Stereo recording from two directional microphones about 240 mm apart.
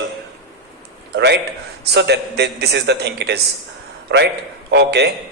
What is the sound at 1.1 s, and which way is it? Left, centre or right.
A man's voice, right.